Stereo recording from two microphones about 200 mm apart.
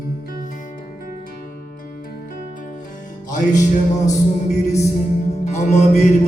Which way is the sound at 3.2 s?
40° left (ahead or behind).